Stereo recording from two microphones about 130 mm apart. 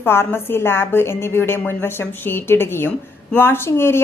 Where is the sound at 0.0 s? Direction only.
15° left (ahead or behind).